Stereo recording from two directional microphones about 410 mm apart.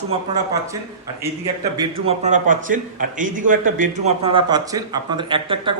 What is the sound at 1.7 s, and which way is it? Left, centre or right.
A man's voice, centre.